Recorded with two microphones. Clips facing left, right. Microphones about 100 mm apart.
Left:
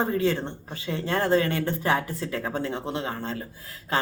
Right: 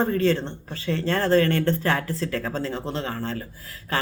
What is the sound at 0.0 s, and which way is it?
Speech, 15° left (ahead or behind).